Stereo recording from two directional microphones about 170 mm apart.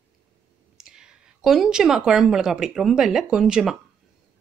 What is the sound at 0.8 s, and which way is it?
Speech, 5° right (ahead or behind).